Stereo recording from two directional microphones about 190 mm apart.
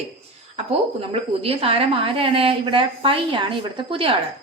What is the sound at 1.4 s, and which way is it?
A woman's voice, 30° right (ahead or behind).